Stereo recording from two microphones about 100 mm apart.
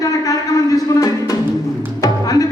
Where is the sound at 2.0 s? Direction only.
40° left (ahead or behind).